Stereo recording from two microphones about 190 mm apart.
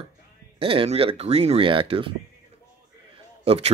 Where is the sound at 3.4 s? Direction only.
30° right (ahead or behind).